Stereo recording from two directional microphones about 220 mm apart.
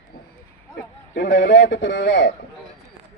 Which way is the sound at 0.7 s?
50° left (ahead or behind).